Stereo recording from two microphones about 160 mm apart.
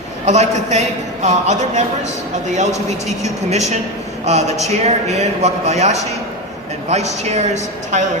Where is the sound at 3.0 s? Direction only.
45° right (ahead or behind).